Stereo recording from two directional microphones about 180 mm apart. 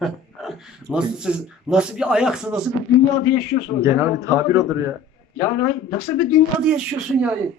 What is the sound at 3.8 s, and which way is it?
A man's voice, 15° right (ahead or behind).